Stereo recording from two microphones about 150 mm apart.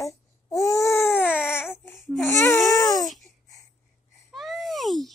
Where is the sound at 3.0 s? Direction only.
Centre (ahead or behind).